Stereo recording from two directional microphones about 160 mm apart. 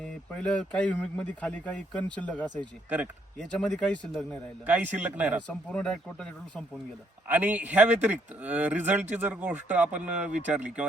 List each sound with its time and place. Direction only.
0.3 s speech: 5° left (ahead or behind)
4.6 s speech: 10° right (ahead or behind)
5.5 s speech: 5° left (ahead or behind)
7.3 s speech: 10° right (ahead or behind)